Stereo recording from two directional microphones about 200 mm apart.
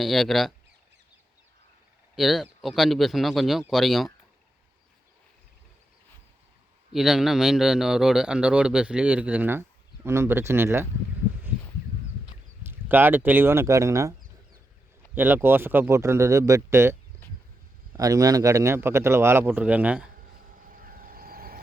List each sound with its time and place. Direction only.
0.0 s a man's voice: centre (ahead or behind)
2.1 s a man's voice: centre (ahead or behind)
6.9 s a man's voice: centre (ahead or behind)
12.6 s speech: 10° right (ahead or behind)
20.6 s vehicle: 45° right (ahead or behind)